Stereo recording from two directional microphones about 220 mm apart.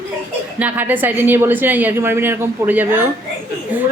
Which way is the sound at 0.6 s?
5° right (ahead or behind).